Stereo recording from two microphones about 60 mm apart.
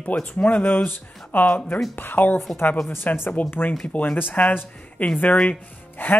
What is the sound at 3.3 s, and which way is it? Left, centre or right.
Speech, left.